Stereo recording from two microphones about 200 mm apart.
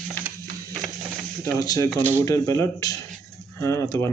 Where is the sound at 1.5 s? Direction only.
20° left (ahead or behind).